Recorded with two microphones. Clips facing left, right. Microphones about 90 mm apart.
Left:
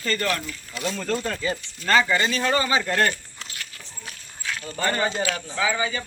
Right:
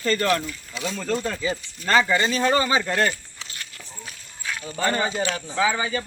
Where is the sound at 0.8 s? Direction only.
Centre (ahead or behind).